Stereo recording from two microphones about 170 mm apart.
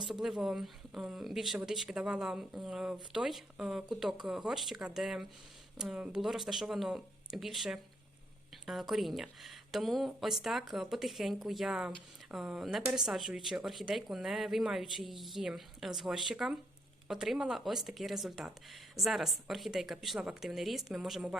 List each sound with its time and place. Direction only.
0.1 s speech: centre (ahead or behind)